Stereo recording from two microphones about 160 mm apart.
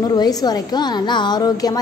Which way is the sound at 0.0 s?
25° left (ahead or behind).